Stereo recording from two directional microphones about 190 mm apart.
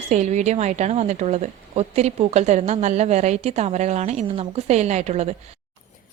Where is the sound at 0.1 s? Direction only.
40° right (ahead or behind).